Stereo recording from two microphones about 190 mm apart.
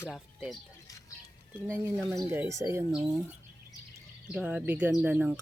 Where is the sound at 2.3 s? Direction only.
15° right (ahead or behind).